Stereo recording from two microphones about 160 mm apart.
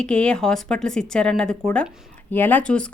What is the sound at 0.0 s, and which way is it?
Speech, 5° left (ahead or behind).